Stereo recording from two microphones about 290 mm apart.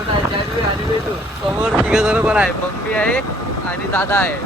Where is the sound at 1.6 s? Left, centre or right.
Centre.